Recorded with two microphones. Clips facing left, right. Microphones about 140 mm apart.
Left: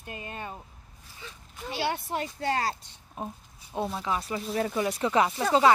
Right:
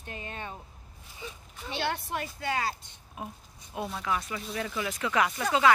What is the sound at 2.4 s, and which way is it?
Speech, 35° left (ahead or behind).